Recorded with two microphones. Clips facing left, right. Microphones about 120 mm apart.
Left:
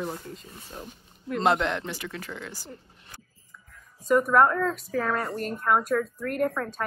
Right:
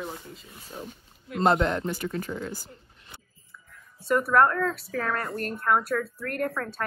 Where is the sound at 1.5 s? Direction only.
40° right (ahead or behind).